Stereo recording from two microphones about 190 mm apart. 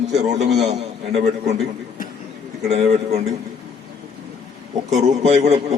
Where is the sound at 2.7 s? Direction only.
35° right (ahead or behind).